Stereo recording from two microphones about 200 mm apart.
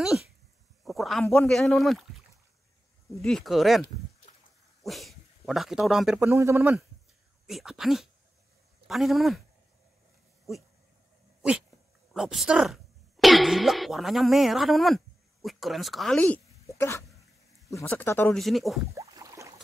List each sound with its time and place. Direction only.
0.8 s a sound: centre (ahead or behind)
1.2 s speech: 5° left (ahead or behind)
4.8 s speech: centre (ahead or behind)
7.4 s speech: centre (ahead or behind)
12.1 s speech: centre (ahead or behind)
18.4 s speech: centre (ahead or behind)
18.9 s boat: 15° right (ahead or behind)